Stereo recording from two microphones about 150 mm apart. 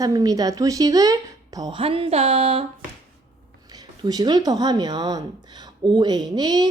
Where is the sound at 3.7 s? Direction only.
25° right (ahead or behind).